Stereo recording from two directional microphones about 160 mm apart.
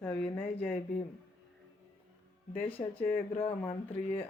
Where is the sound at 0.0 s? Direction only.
10° left (ahead or behind).